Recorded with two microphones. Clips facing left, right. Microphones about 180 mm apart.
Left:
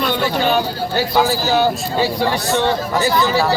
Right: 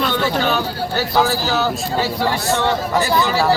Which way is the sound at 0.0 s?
10° left (ahead or behind).